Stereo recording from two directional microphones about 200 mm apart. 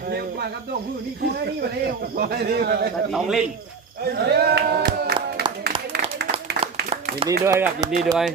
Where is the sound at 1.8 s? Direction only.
50° right (ahead or behind).